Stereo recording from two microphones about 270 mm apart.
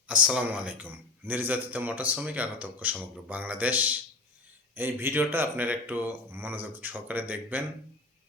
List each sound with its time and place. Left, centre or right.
0.1 s speech: centre